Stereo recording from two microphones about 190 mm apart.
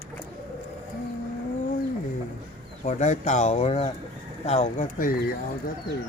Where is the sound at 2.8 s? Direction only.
40° left (ahead or behind).